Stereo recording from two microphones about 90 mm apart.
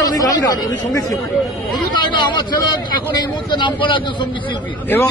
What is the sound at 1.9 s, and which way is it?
A man's voice, 55° left (ahead or behind).